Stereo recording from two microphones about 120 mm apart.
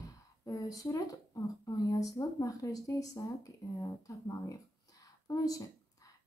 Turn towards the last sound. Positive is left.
turn(degrees=30)  # may be behind; listen again after turning